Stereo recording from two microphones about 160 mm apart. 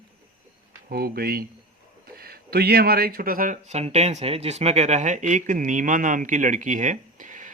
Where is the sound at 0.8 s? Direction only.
70° right (ahead or behind).